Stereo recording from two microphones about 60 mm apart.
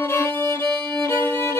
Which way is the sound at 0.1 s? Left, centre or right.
Left.